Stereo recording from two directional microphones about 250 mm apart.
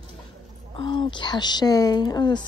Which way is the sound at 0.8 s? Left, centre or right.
Centre.